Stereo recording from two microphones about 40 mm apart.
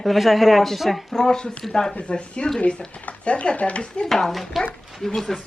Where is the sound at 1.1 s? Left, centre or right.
Centre; by 3.8 s left.